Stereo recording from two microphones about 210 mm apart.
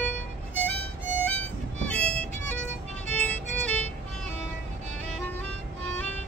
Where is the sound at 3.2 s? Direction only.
5° left (ahead or behind).